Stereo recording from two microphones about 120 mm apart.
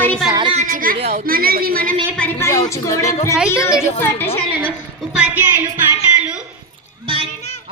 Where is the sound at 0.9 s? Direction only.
60° right (ahead or behind).